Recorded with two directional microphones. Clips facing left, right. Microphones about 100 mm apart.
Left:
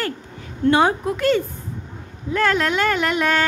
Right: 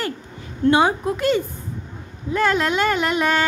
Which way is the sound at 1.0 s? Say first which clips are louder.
Left 1 dB; 20° right (ahead or behind).